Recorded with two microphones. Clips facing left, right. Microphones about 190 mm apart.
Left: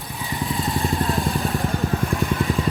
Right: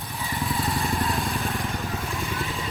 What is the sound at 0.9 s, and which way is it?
Vehicle, 35° left (ahead or behind).